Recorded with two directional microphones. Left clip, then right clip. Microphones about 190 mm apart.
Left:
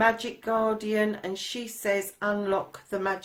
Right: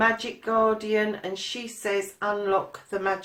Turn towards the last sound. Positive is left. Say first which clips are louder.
# right 2 dB
turn(degrees=40)  # may be behind; listen again after turning